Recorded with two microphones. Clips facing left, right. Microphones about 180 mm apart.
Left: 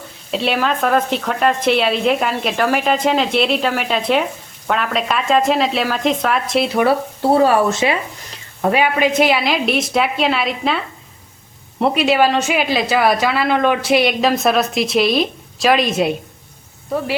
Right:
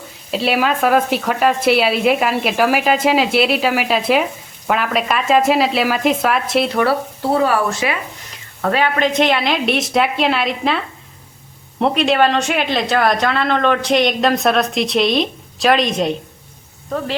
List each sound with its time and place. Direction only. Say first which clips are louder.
0.3 s speech: right 1 dB; 5° right (ahead or behind)
7.2 s speech: left 4 dB; 25° left (ahead or behind)
8.6 s speech: left 1 dB; 15° left (ahead or behind)